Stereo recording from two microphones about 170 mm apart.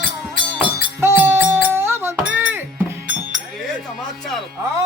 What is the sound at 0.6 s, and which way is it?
Music, 15° right (ahead or behind).